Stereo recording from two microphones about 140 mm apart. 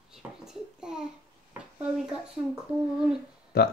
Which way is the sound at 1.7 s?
5° right (ahead or behind).